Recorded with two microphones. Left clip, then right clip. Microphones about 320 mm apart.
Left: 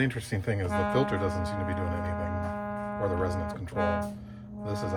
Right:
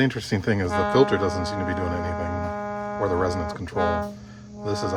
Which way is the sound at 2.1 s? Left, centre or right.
Right.